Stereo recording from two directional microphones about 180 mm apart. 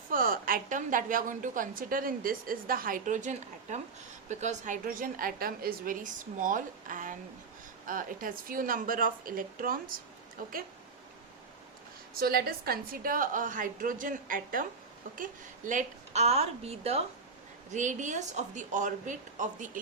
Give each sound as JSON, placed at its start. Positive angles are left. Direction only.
{"t": 0.1, "sound": "a woman's voice", "side_deg": -50}
{"t": 12.2, "sound": "a woman's voice", "side_deg": -55}